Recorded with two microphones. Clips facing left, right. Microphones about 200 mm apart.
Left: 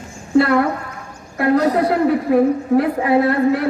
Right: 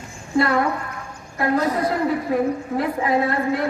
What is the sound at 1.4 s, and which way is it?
A woman's voice, 65° left (ahead or behind).